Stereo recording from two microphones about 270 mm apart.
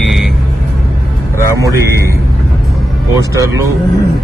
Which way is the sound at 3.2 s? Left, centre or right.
Centre.